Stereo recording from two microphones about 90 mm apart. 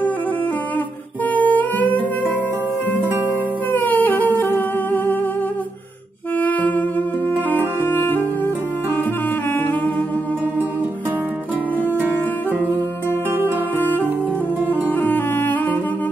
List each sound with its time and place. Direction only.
1.3 s guitar: 20° left (ahead or behind)
3.7 s music: 20° left (ahead or behind)
6.4 s saxophone: 15° left (ahead or behind)
7.4 s music: 20° left (ahead or behind)
13.7 s music: 20° left (ahead or behind)